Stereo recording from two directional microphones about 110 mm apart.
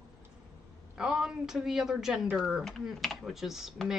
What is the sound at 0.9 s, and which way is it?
Speech, 5° right (ahead or behind).